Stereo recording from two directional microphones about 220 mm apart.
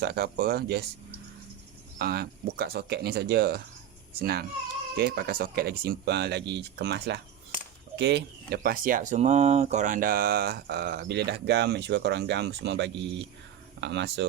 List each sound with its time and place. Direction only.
0.0 s speech: 45° right (ahead or behind)
2.0 s speech: 45° right (ahead or behind)